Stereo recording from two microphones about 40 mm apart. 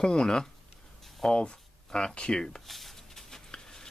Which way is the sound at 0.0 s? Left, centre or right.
Centre.